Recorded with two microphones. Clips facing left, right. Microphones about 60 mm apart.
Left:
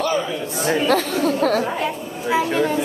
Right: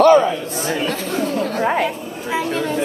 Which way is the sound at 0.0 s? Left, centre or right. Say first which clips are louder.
Right 11 dB; right.